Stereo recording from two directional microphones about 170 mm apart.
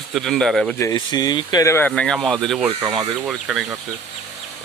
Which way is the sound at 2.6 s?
25° right (ahead or behind).